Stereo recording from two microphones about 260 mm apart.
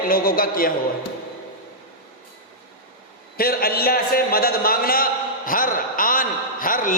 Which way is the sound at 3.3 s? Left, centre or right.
Left.